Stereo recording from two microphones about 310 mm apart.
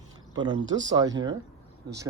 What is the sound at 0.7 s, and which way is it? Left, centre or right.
Speech, right.